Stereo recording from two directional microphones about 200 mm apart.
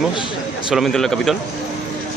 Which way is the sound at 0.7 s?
Centre (ahead or behind).